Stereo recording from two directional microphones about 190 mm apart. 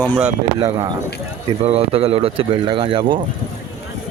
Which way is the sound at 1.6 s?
30° right (ahead or behind).